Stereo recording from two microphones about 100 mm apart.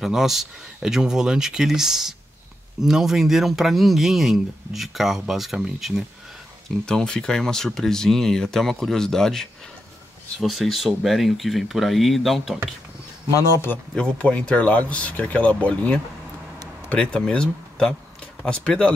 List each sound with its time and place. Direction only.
0.0 s speech: 5° right (ahead or behind)
13.9 s speech: 10° left (ahead or behind)